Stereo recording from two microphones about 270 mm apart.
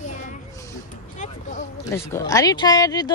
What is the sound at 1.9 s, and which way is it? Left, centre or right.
Speech, centre.